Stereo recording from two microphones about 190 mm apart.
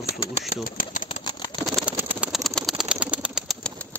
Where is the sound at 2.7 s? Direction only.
5° right (ahead or behind).